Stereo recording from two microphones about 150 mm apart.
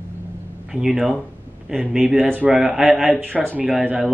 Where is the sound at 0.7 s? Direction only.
5° right (ahead or behind).